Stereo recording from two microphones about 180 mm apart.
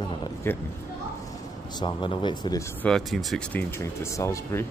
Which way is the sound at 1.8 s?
25° left (ahead or behind).